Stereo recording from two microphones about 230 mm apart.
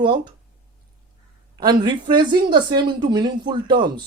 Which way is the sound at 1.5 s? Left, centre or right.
Centre.